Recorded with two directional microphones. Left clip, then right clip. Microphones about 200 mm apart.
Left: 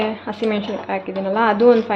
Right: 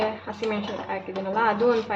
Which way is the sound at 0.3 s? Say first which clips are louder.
Left 7 dB; 40° left (ahead or behind).